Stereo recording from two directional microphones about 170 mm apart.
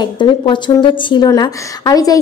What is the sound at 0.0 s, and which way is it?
A woman's voice, 30° left (ahead or behind).